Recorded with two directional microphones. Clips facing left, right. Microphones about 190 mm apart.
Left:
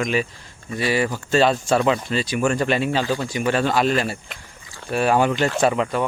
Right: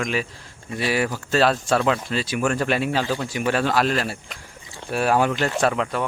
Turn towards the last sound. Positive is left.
turn(degrees=0)  # may be behind; listen again after turning